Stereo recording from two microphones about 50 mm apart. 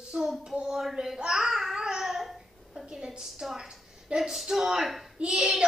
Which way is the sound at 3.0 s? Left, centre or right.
Centre.